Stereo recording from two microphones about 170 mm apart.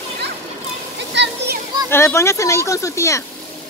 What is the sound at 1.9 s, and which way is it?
Speech, 15° left (ahead or behind).